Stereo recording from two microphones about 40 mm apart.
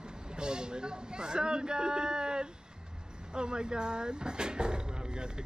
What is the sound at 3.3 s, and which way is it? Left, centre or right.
Speech, right.